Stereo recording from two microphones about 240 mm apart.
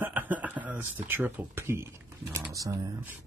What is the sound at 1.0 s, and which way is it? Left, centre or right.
Speech, centre.